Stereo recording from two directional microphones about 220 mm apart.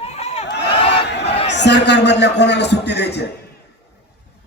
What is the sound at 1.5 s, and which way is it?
A man's voice, 50° left (ahead or behind).